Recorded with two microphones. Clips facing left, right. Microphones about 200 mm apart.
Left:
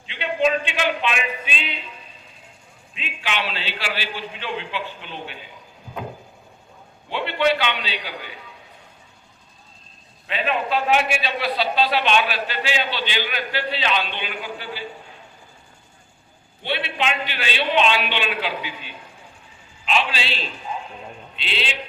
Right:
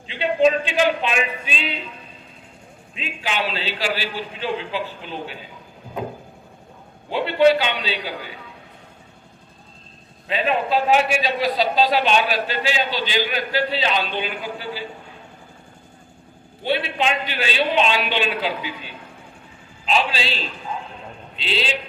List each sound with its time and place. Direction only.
0.1 s a man's voice: 35° right (ahead or behind)
2.9 s a man's voice: 35° right (ahead or behind)
7.1 s a man's voice: 40° right (ahead or behind)
10.2 s a man's voice: 35° right (ahead or behind)
16.6 s a man's voice: 40° right (ahead or behind)
19.8 s a man's voice: 40° right (ahead or behind)